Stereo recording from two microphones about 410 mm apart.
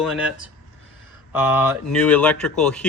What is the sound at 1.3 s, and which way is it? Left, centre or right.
Speech, centre.